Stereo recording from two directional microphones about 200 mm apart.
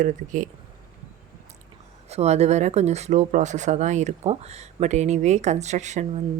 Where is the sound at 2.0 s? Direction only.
30° right (ahead or behind).